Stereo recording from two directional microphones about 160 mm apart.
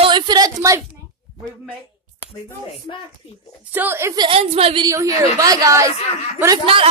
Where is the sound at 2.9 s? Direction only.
35° left (ahead or behind).